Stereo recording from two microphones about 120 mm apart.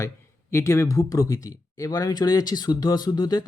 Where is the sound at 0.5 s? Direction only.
25° left (ahead or behind).